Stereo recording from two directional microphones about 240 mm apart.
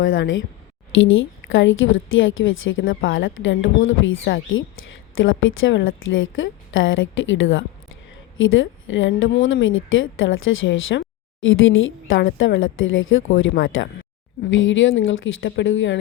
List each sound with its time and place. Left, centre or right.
0.0 s a woman's voice: left